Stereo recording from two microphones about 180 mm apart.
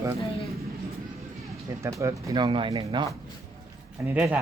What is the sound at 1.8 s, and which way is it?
Speech, 15° right (ahead or behind).